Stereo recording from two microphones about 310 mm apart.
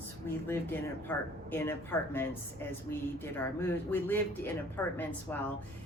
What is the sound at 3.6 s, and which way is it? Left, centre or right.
A woman's voice, centre.